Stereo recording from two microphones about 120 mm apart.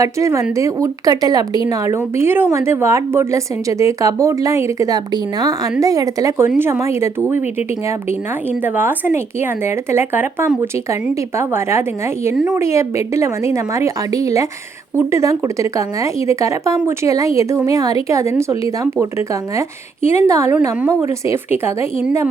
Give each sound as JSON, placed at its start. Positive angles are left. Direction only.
{"t": 0.0, "sound": "a woman's voice", "side_deg": -25}
{"t": 8.6, "sound": "a woman's voice", "side_deg": -15}